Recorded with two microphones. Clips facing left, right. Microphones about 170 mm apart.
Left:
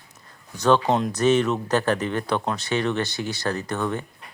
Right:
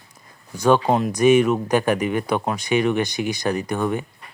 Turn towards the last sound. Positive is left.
turn(degrees=-10)  # may be behind; listen again after turning